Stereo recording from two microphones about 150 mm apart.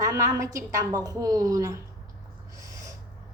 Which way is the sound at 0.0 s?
20° right (ahead or behind).